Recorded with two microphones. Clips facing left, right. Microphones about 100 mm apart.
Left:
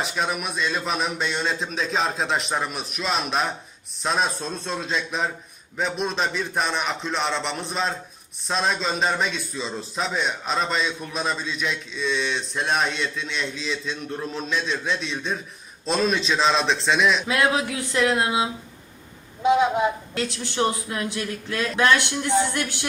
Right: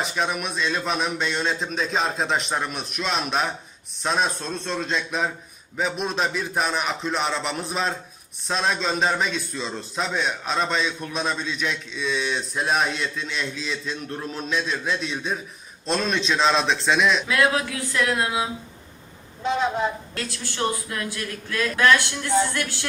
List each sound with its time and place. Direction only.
0.0 s a man's voice: centre (ahead or behind)
17.2 s a man's voice: 20° left (ahead or behind)
19.4 s a man's voice: 10° left (ahead or behind)